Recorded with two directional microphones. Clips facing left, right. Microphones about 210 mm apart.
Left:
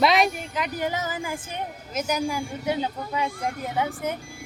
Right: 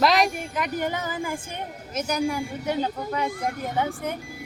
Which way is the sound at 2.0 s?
10° left (ahead or behind).